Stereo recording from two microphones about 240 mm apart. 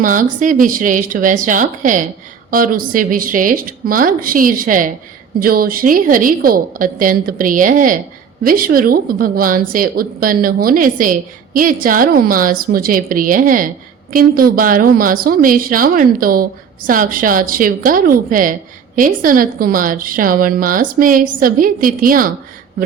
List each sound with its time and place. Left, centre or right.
0.0 s a woman's voice: right